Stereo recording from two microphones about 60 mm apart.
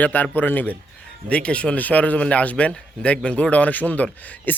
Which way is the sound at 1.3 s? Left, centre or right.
Centre.